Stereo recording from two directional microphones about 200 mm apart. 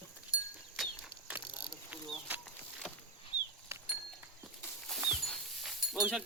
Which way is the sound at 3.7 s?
15° right (ahead or behind).